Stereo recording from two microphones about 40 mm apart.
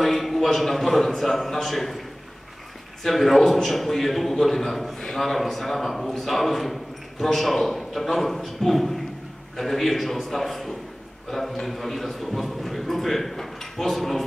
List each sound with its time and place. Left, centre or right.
0.0 s a man's voice: centre
3.0 s a man's voice: centre